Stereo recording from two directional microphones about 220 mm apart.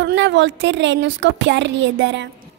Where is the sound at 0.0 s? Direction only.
55° right (ahead or behind).